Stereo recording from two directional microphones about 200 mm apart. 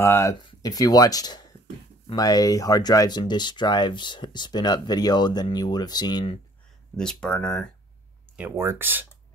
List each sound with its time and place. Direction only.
0.0 s speech: 15° left (ahead or behind)
7.0 s speech: 5° left (ahead or behind)
8.4 s speech: 10° right (ahead or behind)